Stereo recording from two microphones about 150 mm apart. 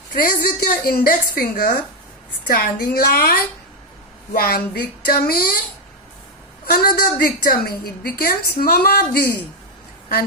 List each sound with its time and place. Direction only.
0.1 s a woman's voice: 65° left (ahead or behind); by 5.5 s 85° left
6.7 s a woman's voice: 80° left